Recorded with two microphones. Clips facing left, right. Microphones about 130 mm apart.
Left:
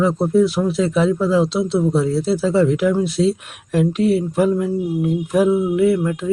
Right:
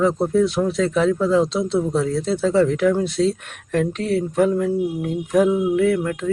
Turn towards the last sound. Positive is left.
turn(degrees=5)  # may be behind; listen again after turning